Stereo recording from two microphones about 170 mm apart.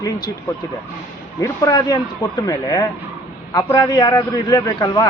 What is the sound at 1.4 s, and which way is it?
Speech, 20° left (ahead or behind).